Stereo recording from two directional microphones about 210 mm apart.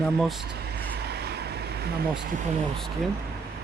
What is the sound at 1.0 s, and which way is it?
Vehicle, 50° right (ahead or behind).